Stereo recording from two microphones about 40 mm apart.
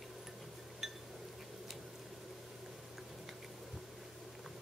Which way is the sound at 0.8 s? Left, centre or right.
Centre.